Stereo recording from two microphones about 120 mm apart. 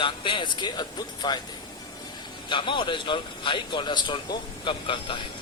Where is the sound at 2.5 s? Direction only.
45° left (ahead or behind).